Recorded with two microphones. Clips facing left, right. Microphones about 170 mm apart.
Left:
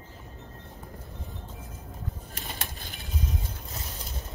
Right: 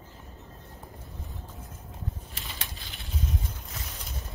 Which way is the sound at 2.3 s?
50° left (ahead or behind).